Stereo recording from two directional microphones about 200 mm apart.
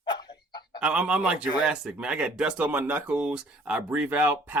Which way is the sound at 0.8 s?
5° right (ahead or behind).